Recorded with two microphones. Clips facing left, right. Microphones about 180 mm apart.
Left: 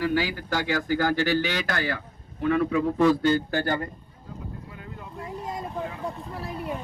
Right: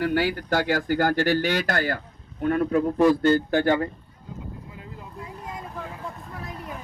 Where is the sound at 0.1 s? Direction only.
50° right (ahead or behind).